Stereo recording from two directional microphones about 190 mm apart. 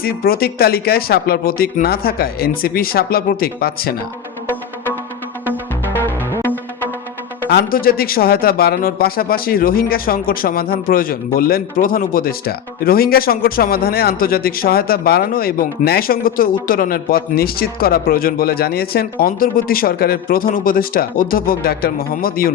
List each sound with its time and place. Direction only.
0.0 s a man's voice: 50° left (ahead or behind)
6.4 s music: 10° left (ahead or behind)
7.5 s a man's voice: 50° left (ahead or behind)